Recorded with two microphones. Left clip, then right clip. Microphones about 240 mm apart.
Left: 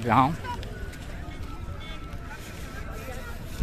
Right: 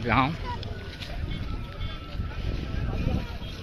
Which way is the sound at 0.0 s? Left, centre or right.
Centre.